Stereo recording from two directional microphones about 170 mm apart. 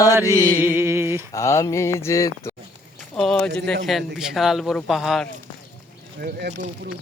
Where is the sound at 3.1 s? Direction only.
5° left (ahead or behind).